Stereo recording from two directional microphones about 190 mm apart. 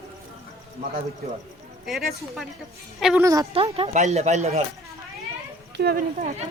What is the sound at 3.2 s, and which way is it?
Speech, 20° right (ahead or behind).